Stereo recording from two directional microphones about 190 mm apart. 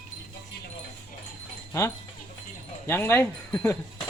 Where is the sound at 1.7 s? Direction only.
15° left (ahead or behind).